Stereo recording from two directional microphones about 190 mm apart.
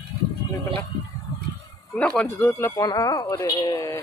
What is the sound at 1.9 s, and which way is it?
Speech, 5° left (ahead or behind).